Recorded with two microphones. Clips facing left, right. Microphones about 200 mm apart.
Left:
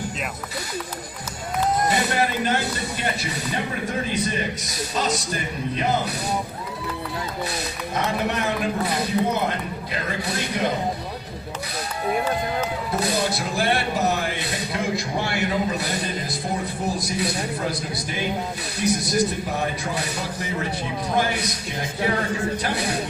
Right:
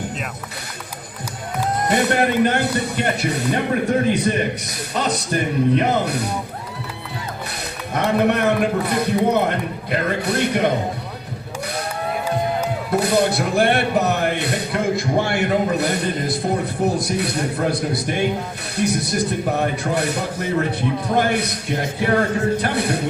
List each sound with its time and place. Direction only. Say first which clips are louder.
1.9 s a man's voice: right 5 dB; 55° right (ahead or behind)
7.9 s a man's voice: right 7 dB; 60° right (ahead or behind)
12.9 s a man's voice: right 8 dB; 60° right (ahead or behind)